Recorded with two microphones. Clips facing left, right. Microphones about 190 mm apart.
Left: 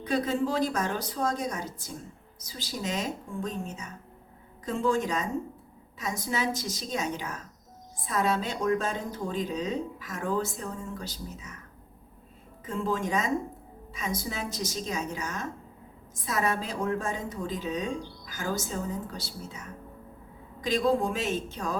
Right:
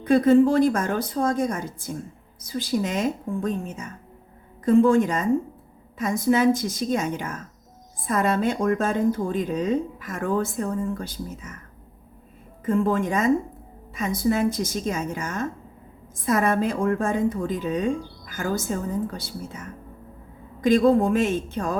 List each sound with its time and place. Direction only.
0.1 s speech: 55° right (ahead or behind)
12.6 s speech: 55° right (ahead or behind)